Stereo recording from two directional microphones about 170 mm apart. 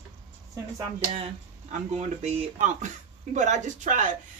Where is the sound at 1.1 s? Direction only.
40° right (ahead or behind).